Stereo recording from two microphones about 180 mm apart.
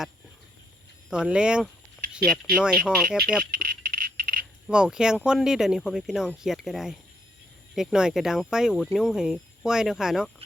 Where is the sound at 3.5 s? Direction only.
50° right (ahead or behind).